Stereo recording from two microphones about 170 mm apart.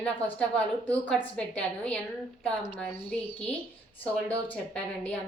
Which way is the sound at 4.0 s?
10° left (ahead or behind).